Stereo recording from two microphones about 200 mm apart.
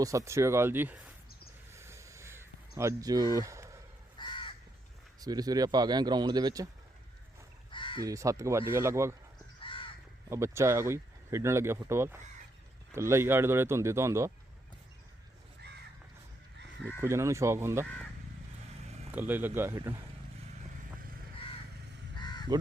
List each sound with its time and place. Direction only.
0.0 s speech: 15° right (ahead or behind)
1.7 s crow: 15° right (ahead or behind)
4.2 s crow: 25° left (ahead or behind)
5.2 s speech: 20° right (ahead or behind)
7.7 s crow: 25° left (ahead or behind)
8.0 s speech: 15° right (ahead or behind)
9.6 s crow: 25° left (ahead or behind)
10.2 s speech: 15° right (ahead or behind)
17.0 s speech: 15° right (ahead or behind)
19.1 s speech: 10° right (ahead or behind)
22.1 s crow: 20° left (ahead or behind)